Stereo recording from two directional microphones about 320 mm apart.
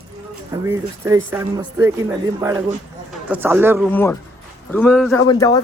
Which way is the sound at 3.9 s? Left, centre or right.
Centre.